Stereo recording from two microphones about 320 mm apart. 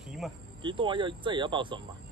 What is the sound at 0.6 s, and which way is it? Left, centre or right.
Speech, centre.